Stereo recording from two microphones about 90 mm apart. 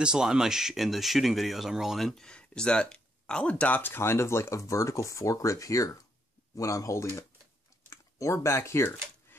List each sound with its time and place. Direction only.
0.0 s speech: 10° right (ahead or behind); by 7.1 s 35° left (ahead or behind)
7.9 s typing: 35° left (ahead or behind)